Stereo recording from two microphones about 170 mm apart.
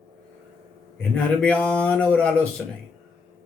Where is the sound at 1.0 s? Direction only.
5° left (ahead or behind).